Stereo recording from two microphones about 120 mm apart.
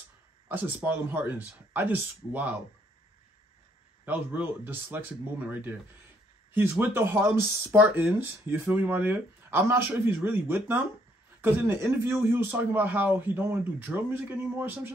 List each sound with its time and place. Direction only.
0.5 s speech: 15° right (ahead or behind)
4.0 s speech: 15° right (ahead or behind)